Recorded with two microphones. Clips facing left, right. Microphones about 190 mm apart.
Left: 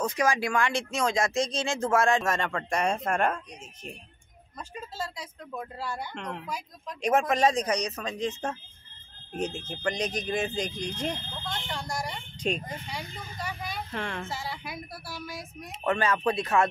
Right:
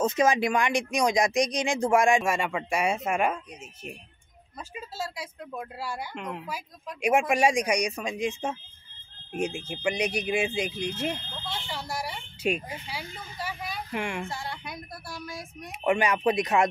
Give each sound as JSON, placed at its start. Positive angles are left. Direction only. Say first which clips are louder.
{"t": 0.0, "sound": "speech", "louder": "right 3 dB", "side_deg": -25}
{"t": 4.7, "sound": "speech", "louder": "right 1 dB", "side_deg": -10}
{"t": 13.9, "sound": "speech", "louder": "right 4 dB", "side_deg": -15}
{"t": 14.2, "sound": "speech", "louder": "even", "side_deg": 0}
{"t": 15.7, "sound": "speech", "louder": "right 2 dB", "side_deg": -15}